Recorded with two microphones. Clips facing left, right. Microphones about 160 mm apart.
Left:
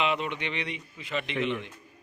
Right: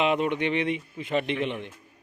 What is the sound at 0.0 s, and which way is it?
A man's voice, 45° right (ahead or behind).